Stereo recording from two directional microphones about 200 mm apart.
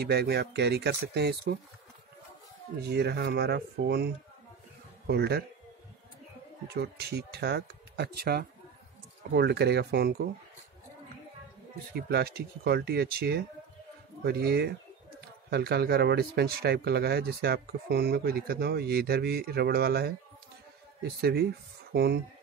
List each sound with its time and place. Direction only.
0.0 s speech: 55° right (ahead or behind)
2.8 s speech: 55° right (ahead or behind)
6.7 s speech: 55° right (ahead or behind)
11.9 s speech: 55° right (ahead or behind)